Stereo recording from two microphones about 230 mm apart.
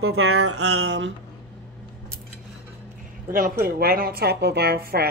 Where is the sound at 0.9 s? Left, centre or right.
Right.